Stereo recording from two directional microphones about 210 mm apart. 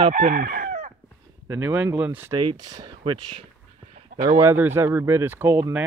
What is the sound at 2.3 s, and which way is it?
Speech, 20° right (ahead or behind).